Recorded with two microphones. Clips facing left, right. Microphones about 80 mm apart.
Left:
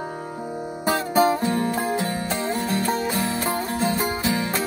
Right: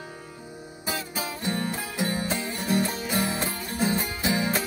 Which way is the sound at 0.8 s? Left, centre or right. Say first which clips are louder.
Left 13 dB; left.